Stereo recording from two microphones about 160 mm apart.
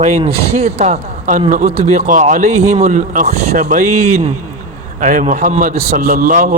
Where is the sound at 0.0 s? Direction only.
40° right (ahead or behind).